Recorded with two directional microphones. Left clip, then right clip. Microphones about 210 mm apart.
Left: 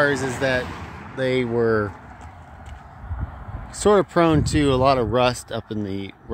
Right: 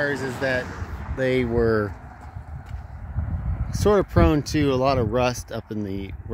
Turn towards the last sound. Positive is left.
turn(degrees=5)  # may be behind; listen again after turning